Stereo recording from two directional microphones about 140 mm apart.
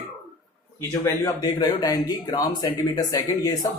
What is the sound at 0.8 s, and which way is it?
Speech, 20° left (ahead or behind).